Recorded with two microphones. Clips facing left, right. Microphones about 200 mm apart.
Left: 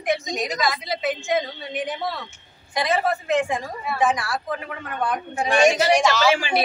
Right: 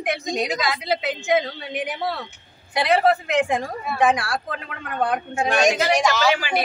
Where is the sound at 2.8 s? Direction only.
65° right (ahead or behind).